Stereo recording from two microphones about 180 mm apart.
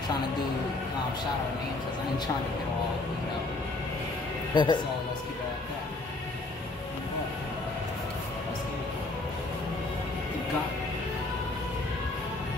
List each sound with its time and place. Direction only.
4.6 s speech: 25° left (ahead or behind)